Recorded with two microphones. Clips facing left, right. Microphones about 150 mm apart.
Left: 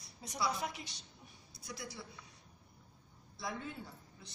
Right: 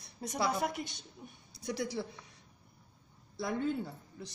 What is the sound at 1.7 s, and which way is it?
Speech, 75° right (ahead or behind).